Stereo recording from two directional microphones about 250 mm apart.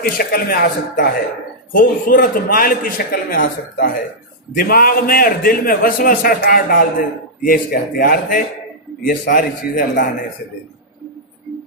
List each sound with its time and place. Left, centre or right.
0.0 s a man's voice: left